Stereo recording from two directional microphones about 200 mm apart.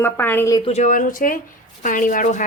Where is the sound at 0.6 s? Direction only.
35° left (ahead or behind).